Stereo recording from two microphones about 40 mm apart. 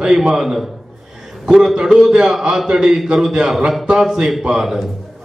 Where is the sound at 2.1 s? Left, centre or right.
Centre.